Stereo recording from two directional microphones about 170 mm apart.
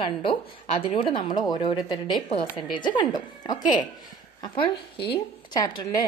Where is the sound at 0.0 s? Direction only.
30° left (ahead or behind).